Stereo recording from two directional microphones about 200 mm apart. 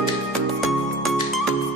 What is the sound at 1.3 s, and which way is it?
Music, centre (ahead or behind).